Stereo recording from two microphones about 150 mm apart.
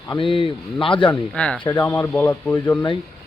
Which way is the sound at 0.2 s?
35° left (ahead or behind).